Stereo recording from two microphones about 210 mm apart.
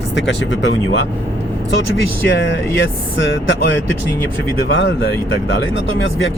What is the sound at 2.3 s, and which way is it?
Speech, 60° left (ahead or behind).